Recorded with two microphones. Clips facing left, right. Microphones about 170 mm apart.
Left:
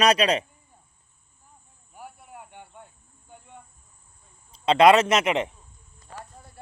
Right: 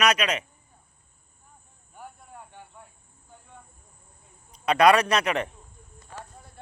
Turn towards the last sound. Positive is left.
turn(degrees=0)  # may be behind; listen again after turning